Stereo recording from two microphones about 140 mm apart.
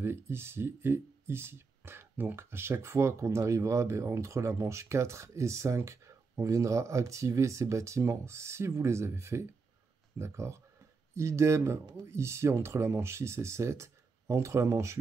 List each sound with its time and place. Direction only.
0.0 s speech: 15° right (ahead or behind)